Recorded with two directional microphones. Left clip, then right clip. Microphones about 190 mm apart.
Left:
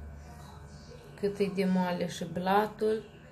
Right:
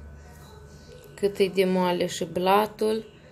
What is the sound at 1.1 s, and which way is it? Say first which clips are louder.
Speech: right 8 dB; 45° right (ahead or behind).